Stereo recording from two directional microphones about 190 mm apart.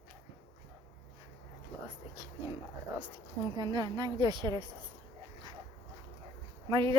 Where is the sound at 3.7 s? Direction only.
20° right (ahead or behind).